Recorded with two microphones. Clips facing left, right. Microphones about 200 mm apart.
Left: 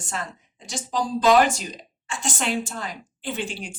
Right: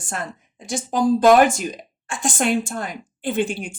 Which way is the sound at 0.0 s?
50° right (ahead or behind).